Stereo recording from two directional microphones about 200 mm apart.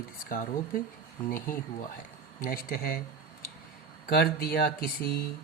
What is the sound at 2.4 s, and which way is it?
Speech, 45° left (ahead or behind).